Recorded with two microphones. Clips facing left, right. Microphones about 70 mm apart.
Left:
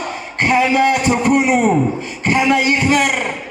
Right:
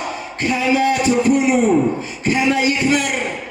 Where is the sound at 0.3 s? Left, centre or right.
Left.